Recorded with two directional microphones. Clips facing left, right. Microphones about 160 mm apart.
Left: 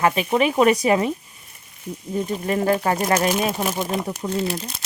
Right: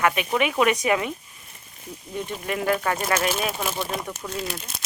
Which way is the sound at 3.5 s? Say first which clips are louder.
Left 4 dB; 15° left (ahead or behind).